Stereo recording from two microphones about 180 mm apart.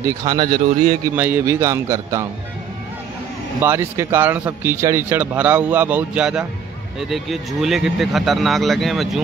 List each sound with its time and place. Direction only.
0.0 s speech: 20° right (ahead or behind)
1.0 s a man's voice: 10° right (ahead or behind)
3.6 s a man's voice: 15° right (ahead or behind)